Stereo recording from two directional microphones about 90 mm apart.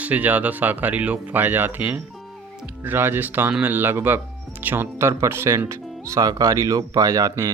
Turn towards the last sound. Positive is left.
turn(degrees=-35)  # may be behind; listen again after turning